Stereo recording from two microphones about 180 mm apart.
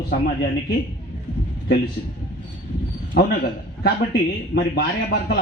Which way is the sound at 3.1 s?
55° left (ahead or behind).